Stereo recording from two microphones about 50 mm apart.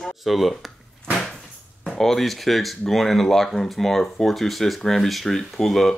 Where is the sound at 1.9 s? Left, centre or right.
Centre.